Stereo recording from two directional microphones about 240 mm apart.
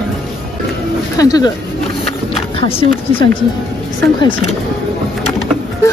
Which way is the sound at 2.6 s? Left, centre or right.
Left.